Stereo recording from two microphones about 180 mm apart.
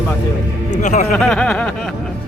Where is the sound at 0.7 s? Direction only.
40° left (ahead or behind).